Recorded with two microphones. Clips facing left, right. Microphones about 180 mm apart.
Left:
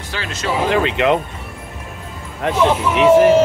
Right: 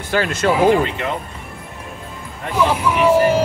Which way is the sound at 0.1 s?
50° right (ahead or behind).